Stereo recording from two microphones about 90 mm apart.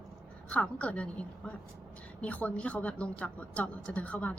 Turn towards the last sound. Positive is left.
turn(degrees=15)  # may be behind; listen again after turning